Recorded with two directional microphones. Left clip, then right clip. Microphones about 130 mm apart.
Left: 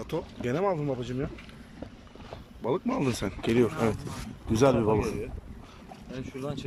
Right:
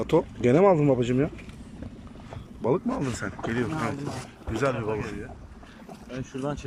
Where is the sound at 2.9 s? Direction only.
20° left (ahead or behind).